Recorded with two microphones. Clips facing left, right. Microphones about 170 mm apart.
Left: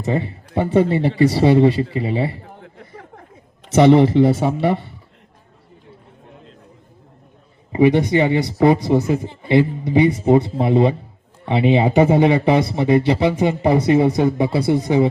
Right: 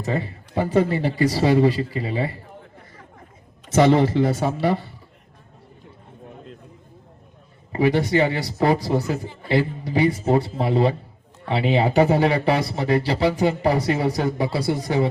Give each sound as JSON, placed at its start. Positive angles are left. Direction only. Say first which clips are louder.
{"t": 0.0, "sound": "speech", "louder": "left 4 dB", "side_deg": 25}
{"t": 2.6, "sound": "a sound", "louder": "left 5 dB", "side_deg": 70}
{"t": 3.8, "sound": "speech", "louder": "left 5 dB", "side_deg": 20}
{"t": 7.7, "sound": "speech", "louder": "left 5 dB", "side_deg": 20}